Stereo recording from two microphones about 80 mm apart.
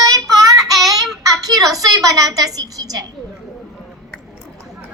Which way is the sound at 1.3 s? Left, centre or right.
Right.